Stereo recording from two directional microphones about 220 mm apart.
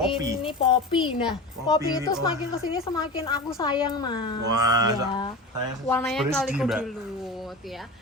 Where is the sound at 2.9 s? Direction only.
20° left (ahead or behind).